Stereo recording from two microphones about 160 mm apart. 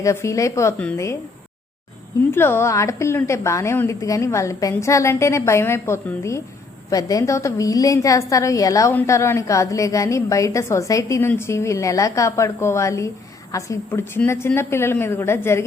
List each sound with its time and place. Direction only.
0.0 s a woman's voice: 15° left (ahead or behind)
2.3 s a woman's voice: 15° left (ahead or behind)